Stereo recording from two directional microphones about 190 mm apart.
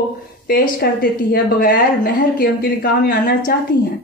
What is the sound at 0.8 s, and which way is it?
Speech, 55° left (ahead or behind).